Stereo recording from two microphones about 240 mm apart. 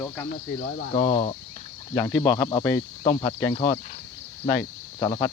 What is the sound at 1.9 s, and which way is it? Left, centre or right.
Speech, centre.